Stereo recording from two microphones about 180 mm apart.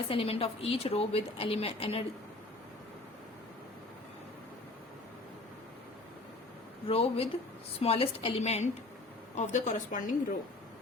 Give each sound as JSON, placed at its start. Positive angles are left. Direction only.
{"t": 0.1, "sound": "a woman's voice", "side_deg": 30}
{"t": 6.8, "sound": "a woman's voice", "side_deg": 30}